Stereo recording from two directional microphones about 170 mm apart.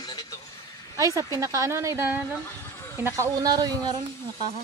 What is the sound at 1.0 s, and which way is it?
Speech, 20° right (ahead or behind).